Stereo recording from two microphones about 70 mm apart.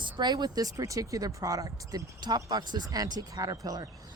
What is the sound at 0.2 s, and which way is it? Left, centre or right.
Speech, right.